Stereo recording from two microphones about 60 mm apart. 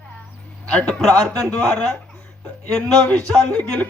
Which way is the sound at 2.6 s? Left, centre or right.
Left.